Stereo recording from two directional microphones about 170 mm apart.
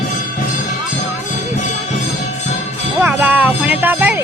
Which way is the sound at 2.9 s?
10° right (ahead or behind).